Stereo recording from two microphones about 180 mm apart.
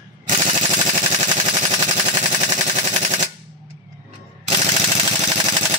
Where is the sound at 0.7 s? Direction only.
40° right (ahead or behind).